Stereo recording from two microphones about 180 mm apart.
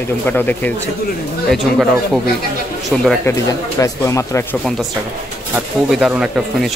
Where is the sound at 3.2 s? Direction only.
15° left (ahead or behind).